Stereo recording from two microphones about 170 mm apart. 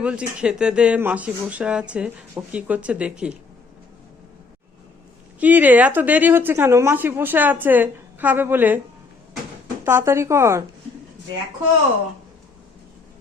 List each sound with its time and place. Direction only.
0.0 s a woman's voice: 5° right (ahead or behind)
5.4 s a woman's voice: 10° right (ahead or behind)
9.8 s a woman's voice: 15° right (ahead or behind)